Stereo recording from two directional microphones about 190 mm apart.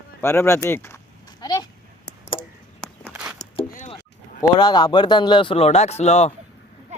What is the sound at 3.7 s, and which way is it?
Vehicle, 40° left (ahead or behind).